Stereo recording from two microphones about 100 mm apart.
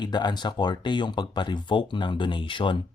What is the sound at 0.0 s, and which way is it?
Speech, 45° left (ahead or behind).